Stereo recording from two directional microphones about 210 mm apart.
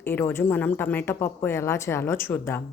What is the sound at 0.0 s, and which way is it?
A woman's voice, 10° left (ahead or behind).